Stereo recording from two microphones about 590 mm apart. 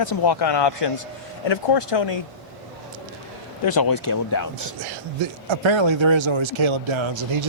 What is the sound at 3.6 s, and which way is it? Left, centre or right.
Speech, left.